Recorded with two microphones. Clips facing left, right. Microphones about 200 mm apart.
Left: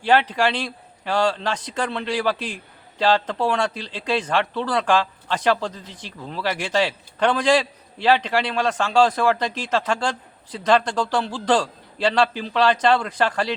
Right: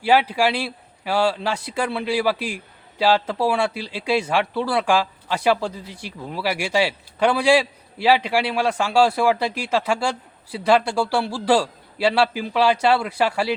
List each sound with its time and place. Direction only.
0.0 s speech: 10° right (ahead or behind)